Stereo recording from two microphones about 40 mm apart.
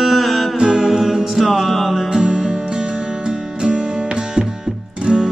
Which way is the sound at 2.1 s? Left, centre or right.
Centre.